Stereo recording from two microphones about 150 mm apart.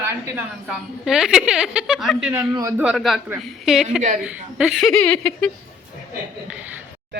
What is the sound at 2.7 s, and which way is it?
A woman's voice, 5° right (ahead or behind).